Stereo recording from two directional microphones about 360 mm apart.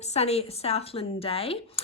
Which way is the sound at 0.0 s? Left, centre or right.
Centre.